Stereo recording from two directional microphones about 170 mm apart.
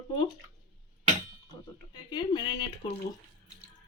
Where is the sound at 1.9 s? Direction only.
25° left (ahead or behind).